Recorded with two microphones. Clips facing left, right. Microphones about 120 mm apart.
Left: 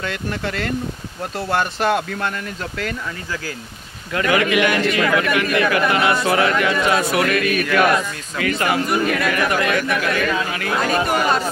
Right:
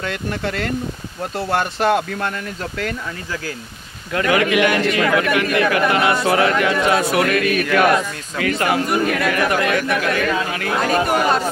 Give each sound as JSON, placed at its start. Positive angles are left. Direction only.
{"t": 1.5, "sound": "speech", "side_deg": -25}
{"t": 4.2, "sound": "a man's voice", "side_deg": -40}
{"t": 7.2, "sound": "a man's voice", "side_deg": -40}